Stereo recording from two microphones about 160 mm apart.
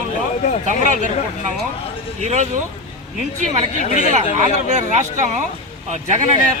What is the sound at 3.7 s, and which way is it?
Speech, 50° left (ahead or behind).